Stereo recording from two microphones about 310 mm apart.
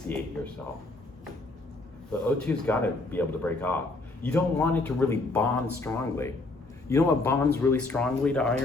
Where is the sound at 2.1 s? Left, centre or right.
Centre.